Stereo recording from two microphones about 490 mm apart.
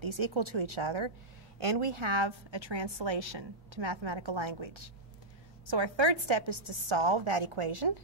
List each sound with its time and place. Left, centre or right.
0.0 s a woman's voice: right
1.6 s a woman's voice: right